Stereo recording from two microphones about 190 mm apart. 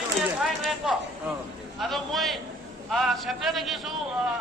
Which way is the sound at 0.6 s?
Centre (ahead or behind).